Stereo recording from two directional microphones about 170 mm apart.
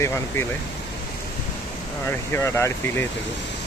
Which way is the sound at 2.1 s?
15° left (ahead or behind).